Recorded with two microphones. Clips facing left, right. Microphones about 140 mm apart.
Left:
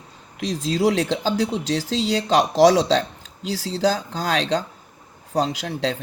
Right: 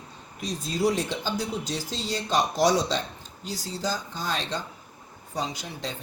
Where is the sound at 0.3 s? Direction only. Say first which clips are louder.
Left 7 dB; 90° left.